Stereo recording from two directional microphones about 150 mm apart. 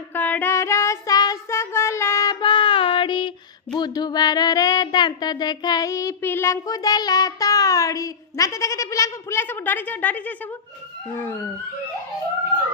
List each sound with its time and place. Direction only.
0.1 s child singing: 10° left (ahead or behind)